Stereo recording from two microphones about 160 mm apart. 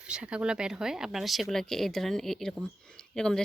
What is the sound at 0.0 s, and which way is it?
Speech, 5° right (ahead or behind).